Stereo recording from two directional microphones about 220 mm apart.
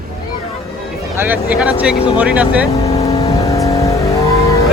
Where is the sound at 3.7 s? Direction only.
15° left (ahead or behind).